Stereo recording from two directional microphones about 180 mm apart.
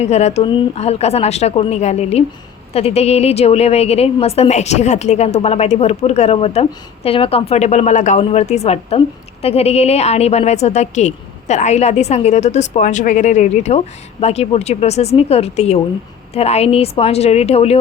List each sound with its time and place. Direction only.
0.0 s a woman's voice: 35° left (ahead or behind)